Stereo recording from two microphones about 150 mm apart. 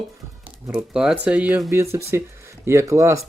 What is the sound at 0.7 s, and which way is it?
Speech, 5° right (ahead or behind).